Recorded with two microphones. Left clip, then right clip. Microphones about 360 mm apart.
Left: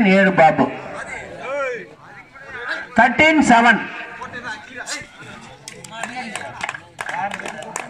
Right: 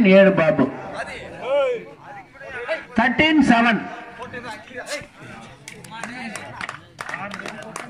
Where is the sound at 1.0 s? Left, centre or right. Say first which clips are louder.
Left 1 dB; centre.